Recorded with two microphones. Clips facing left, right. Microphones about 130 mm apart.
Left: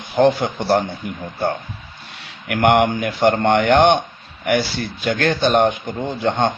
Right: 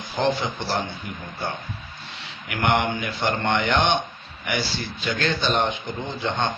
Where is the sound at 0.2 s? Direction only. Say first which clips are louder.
Left 8 dB; 55° left (ahead or behind).